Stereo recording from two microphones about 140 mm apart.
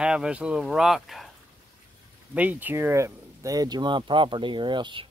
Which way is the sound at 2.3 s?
10° right (ahead or behind).